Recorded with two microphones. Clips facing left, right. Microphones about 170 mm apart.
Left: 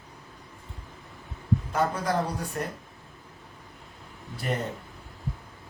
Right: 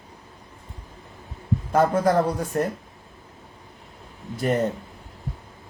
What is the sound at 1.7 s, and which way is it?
Speech, 50° right (ahead or behind).